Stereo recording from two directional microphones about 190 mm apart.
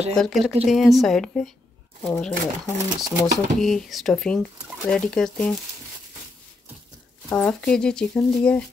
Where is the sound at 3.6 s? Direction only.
Centre (ahead or behind).